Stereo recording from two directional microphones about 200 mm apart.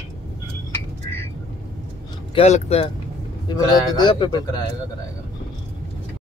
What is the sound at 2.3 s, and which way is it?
Speech, 30° left (ahead or behind).